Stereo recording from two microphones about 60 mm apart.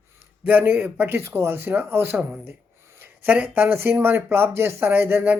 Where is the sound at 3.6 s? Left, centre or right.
Right.